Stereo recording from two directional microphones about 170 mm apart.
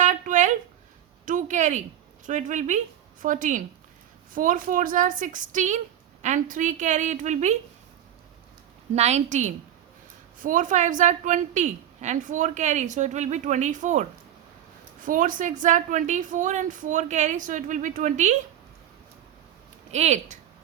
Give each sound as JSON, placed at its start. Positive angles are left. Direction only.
{"t": 0.0, "sound": "a sound", "side_deg": -45}
{"t": 1.2, "sound": "a woman's voice", "side_deg": -50}
{"t": 9.0, "sound": "a woman's voice", "side_deg": -40}
{"t": 19.9, "sound": "a woman's voice", "side_deg": -40}